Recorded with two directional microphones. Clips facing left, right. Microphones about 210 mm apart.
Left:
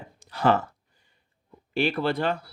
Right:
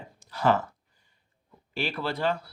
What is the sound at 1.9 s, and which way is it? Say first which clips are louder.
Speech: left 3 dB; 55° left (ahead or behind).